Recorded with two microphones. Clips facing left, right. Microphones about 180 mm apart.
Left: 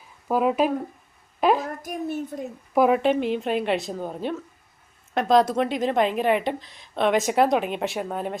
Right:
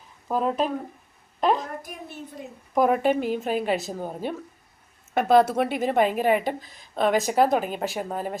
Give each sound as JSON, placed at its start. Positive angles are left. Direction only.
{"t": 0.3, "sound": "a woman's voice", "side_deg": 10}
{"t": 1.8, "sound": "a child's voice", "side_deg": 50}
{"t": 2.7, "sound": "a woman's voice", "side_deg": 5}